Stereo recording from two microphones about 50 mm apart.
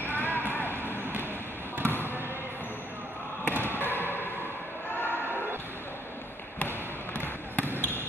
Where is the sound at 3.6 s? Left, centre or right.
Left.